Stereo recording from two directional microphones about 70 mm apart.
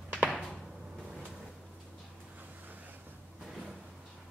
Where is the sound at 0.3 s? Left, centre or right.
Centre.